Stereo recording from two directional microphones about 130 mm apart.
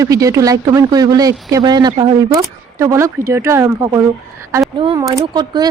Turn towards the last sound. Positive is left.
turn(degrees=-30)  # may be behind; listen again after turning